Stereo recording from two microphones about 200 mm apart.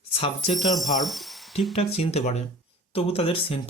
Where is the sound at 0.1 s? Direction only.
30° left (ahead or behind).